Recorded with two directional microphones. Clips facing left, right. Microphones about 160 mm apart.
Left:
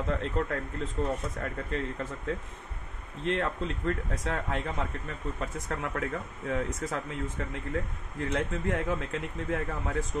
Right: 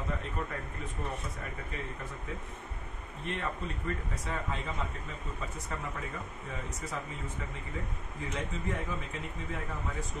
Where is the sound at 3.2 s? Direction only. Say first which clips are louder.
Left 7 dB; 90° left.